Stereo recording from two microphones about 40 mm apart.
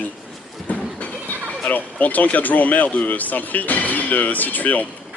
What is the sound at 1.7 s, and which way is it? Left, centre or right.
Speech, left.